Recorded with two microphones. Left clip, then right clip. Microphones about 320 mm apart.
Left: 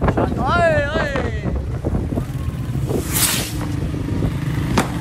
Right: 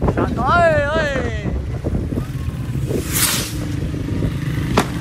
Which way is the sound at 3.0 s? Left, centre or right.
Centre.